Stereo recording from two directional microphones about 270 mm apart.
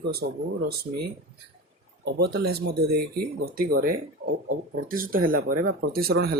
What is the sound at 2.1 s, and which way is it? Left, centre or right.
Speech, right.